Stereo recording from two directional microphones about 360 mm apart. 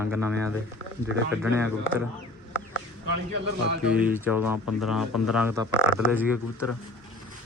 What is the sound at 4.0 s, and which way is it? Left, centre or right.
Speech, centre.